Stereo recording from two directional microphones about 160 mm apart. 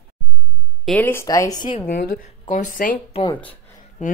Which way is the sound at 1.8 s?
65° left (ahead or behind).